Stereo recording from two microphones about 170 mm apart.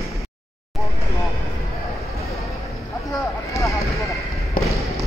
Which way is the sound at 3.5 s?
20° left (ahead or behind).